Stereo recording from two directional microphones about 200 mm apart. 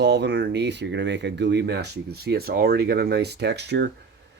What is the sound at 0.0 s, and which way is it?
Speech, 60° right (ahead or behind).